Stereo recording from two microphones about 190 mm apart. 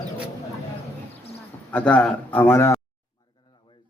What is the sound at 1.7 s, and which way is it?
Speech, 5° left (ahead or behind).